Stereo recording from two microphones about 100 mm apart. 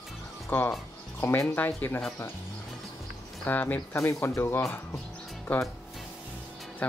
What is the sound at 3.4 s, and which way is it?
Speech, 20° left (ahead or behind).